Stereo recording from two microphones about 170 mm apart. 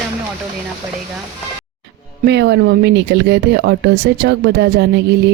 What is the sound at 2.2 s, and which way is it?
Speech, 90° right.